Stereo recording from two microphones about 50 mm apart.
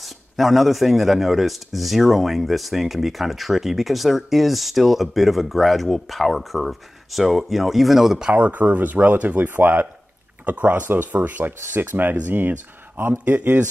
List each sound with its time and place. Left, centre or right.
0.0 s speech: centre
8.2 s speech: right